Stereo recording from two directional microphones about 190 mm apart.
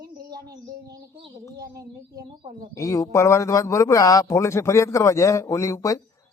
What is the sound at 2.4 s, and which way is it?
Speech, 30° right (ahead or behind).